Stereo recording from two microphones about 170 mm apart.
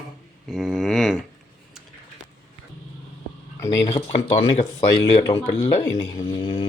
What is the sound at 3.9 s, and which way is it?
Speech, 35° left (ahead or behind).